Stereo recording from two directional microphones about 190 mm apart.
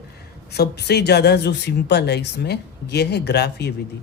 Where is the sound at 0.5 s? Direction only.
60° left (ahead or behind).